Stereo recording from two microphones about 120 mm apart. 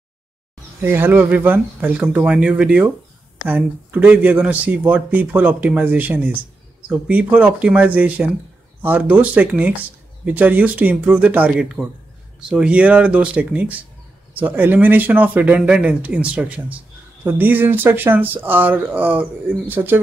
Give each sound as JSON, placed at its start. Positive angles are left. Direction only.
{"t": 0.7, "sound": "speech", "side_deg": -20}